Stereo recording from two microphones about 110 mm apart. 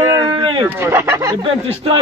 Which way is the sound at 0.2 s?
50° right (ahead or behind).